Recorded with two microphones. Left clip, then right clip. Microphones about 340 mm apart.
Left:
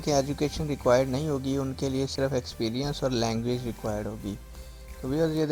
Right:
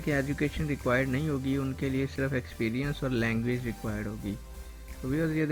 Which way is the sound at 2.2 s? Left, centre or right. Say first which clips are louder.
Left 6 dB; left.